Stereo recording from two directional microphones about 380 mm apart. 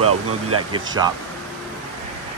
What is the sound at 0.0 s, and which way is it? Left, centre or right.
Speech, right.